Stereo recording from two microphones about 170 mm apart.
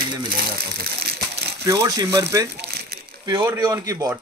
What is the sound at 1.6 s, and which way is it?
Speech, 20° right (ahead or behind).